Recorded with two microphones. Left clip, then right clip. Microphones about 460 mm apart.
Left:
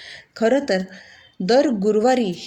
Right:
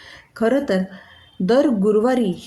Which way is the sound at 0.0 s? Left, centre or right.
Right.